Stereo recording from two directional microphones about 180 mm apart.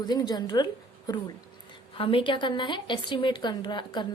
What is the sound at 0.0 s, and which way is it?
A woman's voice, 25° left (ahead or behind).